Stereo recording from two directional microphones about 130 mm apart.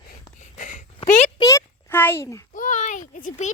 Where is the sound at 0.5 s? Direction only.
80° left.